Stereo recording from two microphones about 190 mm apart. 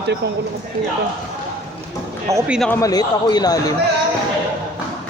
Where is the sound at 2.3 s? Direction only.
10° right (ahead or behind).